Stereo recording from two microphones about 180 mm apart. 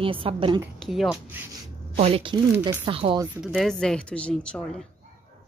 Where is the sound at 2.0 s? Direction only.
30° right (ahead or behind).